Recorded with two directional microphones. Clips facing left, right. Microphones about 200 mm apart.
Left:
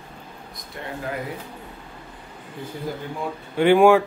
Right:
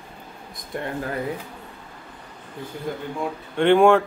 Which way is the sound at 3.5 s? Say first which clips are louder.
Left 1 dB; 5° left (ahead or behind).